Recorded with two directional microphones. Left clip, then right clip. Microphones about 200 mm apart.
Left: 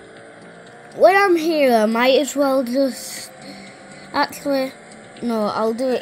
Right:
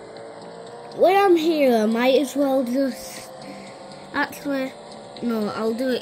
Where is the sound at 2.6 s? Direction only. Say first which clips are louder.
Left 4 dB; 15° left (ahead or behind).